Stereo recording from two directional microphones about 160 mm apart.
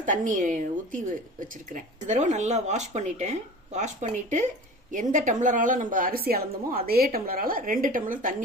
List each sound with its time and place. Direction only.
0.0 s a woman's voice: 55° right (ahead or behind)